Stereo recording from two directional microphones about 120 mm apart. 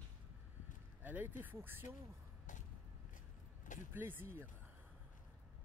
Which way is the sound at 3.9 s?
15° right (ahead or behind).